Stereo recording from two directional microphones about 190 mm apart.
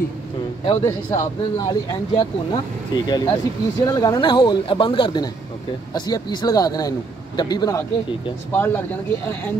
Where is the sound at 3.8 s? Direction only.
20° left (ahead or behind).